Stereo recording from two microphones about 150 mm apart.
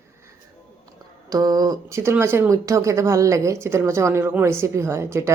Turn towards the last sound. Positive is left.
turn(degrees=-20)  # may be behind; listen again after turning